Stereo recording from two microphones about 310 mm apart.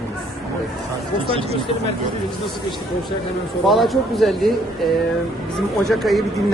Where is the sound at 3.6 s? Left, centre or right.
Centre.